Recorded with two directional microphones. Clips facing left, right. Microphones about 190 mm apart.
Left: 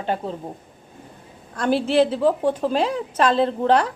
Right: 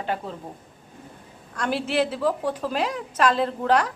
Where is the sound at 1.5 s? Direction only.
30° left (ahead or behind).